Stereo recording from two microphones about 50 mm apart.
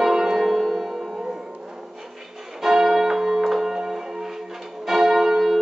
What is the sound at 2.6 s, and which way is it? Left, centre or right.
Church bell, centre.